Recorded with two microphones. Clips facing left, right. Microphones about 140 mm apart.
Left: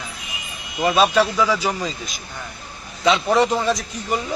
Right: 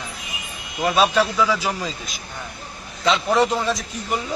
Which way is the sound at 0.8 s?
Centre (ahead or behind).